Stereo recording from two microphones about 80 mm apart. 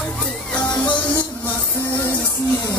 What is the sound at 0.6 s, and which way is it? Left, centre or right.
Music, left.